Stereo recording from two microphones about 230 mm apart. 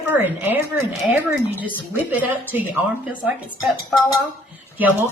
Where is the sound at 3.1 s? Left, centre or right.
Centre.